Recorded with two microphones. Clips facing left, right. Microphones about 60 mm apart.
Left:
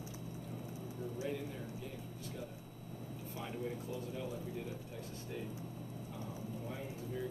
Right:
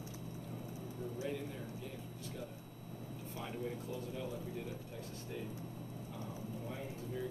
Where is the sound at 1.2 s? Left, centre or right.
Centre.